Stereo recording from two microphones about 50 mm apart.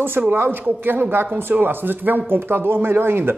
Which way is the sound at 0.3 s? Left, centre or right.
Right.